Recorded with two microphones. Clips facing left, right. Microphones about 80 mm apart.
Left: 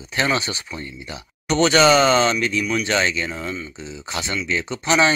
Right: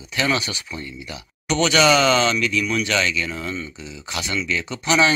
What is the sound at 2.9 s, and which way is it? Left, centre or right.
Speech, left.